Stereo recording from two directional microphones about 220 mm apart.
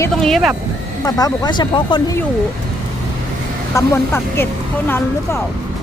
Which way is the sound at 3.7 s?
10° left (ahead or behind).